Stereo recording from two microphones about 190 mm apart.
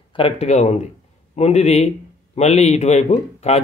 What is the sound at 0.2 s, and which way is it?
A man's voice, 35° left (ahead or behind).